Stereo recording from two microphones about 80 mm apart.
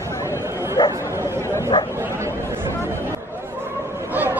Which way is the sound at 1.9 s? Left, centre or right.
Right.